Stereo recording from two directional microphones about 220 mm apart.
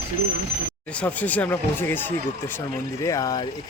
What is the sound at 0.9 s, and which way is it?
Speech, 5° left (ahead or behind).